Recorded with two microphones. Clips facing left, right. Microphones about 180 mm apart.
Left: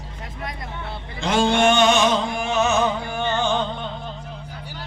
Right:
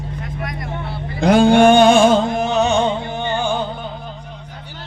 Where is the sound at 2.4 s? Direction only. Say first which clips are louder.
Right 4 dB; 35° right (ahead or behind); by 3.7 s 10° right (ahead or behind).